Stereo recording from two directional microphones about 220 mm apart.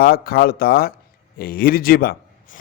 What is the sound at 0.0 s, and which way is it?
A man's voice, 45° left (ahead or behind).